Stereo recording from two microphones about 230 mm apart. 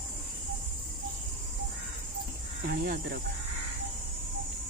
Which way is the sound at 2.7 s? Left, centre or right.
Right.